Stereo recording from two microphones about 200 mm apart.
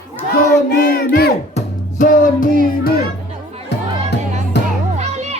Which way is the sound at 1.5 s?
40° left (ahead or behind).